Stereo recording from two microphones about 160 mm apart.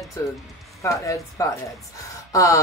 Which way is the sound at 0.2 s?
20° left (ahead or behind).